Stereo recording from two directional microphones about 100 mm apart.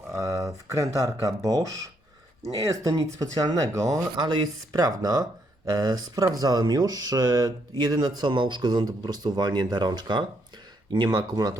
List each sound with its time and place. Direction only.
0.1 s speech: 35° right (ahead or behind)